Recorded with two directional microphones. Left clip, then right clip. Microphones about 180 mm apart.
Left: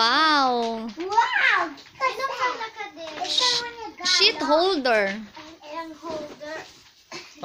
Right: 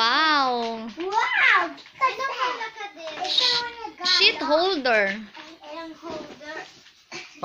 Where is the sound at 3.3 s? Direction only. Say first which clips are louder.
Right 1 dB; 15° left (ahead or behind).